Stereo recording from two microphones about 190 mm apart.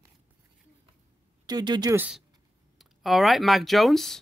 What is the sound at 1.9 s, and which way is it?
Speech, 10° right (ahead or behind).